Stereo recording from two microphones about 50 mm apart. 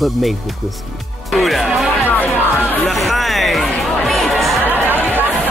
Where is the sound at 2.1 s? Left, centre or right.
Left.